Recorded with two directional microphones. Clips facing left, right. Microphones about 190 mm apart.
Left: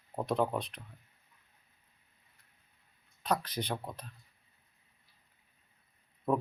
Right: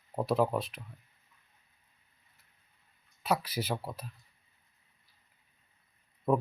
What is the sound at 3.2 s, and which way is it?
Speech, 10° right (ahead or behind).